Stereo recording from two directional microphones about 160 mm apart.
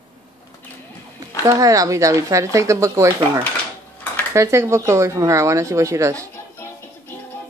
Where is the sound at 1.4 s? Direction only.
20° right (ahead or behind).